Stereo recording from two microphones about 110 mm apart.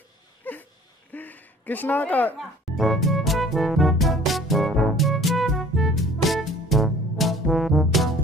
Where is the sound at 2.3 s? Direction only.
Centre (ahead or behind).